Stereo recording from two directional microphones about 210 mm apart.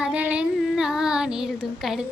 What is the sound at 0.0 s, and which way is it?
Female singing, 5° right (ahead or behind).